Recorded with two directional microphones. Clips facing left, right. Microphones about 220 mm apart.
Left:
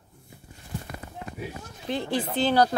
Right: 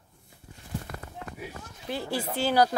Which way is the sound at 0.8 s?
15° left (ahead or behind).